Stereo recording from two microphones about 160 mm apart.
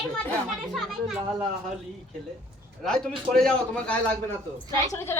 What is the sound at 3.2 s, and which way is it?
Speech, 5° left (ahead or behind).